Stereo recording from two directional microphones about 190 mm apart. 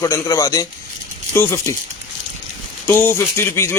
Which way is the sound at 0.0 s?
15° left (ahead or behind).